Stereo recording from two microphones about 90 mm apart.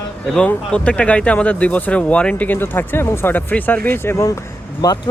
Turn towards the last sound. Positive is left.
turn(degrees=45)  # may be behind; listen again after turning